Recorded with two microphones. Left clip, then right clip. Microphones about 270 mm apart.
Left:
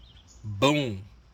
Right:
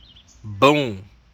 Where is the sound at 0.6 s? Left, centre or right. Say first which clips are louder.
Right 8 dB; centre.